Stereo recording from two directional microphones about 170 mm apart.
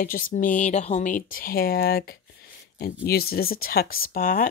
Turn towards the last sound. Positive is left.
turn(degrees=55)  # may be behind; listen again after turning